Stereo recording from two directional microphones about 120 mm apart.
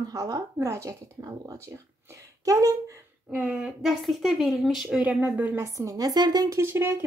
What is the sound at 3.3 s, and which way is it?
Speech, 10° right (ahead or behind).